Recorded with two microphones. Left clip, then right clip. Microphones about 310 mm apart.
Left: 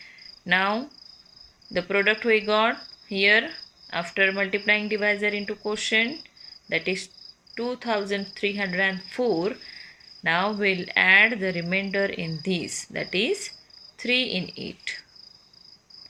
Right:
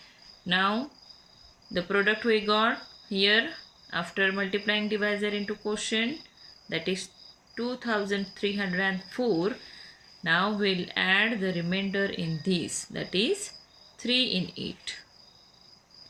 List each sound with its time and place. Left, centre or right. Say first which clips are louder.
0.4 s cricket: left 3 dB; centre
1.7 s speech: left 3 dB; centre
10.2 s speech: left 3 dB; centre
14.3 s speech: left 1 dB; left